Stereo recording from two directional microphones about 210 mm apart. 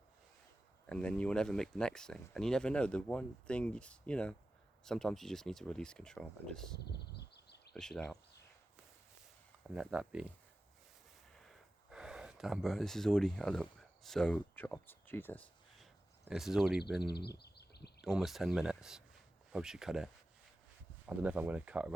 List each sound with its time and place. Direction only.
0.9 s speech: 5° left (ahead or behind)
7.0 s a sound: 50° left (ahead or behind)
7.7 s speech: 5° left (ahead or behind)
9.6 s speech: 5° right (ahead or behind)
11.3 s a sound: centre (ahead or behind)
16.3 s speech: centre (ahead or behind)
17.0 s speech: 50° left (ahead or behind)
18.0 s speech: centre (ahead or behind)
21.2 s speech: 5° right (ahead or behind)